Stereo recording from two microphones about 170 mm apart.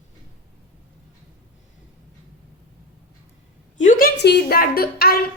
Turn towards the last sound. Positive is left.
turn(degrees=65)  # may be behind; listen again after turning